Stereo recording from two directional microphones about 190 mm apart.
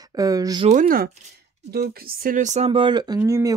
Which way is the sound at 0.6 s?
45° right (ahead or behind).